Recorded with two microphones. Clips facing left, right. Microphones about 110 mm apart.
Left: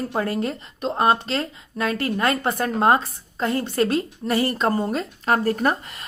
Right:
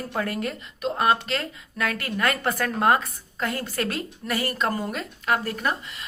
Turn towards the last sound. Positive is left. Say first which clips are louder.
# left 5 dB
turn(degrees=45)  # may be behind; listen again after turning